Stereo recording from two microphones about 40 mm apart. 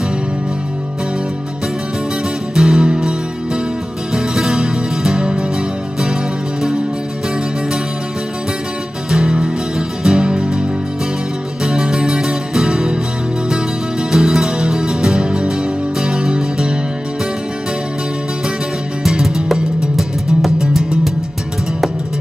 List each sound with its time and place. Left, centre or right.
2.5 s music: centre
9.1 s music: centre
11.6 s music: centre
14.1 s music: centre
19.0 s music: centre